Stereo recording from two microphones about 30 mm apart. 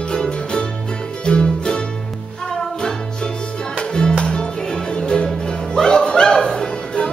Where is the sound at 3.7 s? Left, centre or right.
Left.